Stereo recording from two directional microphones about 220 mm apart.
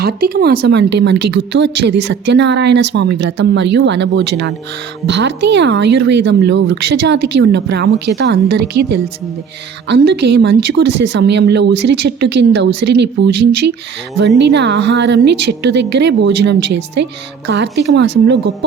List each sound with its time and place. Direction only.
0.0 s a woman's voice: 45° right (ahead or behind)